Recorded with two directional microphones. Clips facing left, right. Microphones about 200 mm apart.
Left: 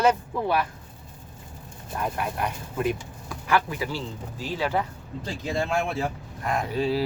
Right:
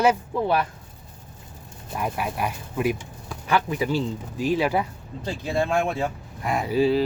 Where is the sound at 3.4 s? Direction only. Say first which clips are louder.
Right 2 dB; 20° right (ahead or behind).